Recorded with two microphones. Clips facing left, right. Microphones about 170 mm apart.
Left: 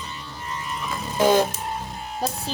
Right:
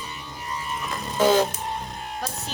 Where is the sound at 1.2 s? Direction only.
10° left (ahead or behind).